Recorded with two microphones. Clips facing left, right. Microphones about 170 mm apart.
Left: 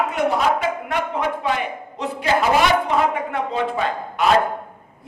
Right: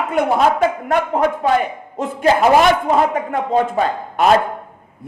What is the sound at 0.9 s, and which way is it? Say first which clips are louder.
A man's voice: right 6 dB; 45° right (ahead or behind).